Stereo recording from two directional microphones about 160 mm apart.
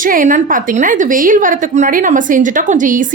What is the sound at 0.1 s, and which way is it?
A woman's voice, 55° right (ahead or behind).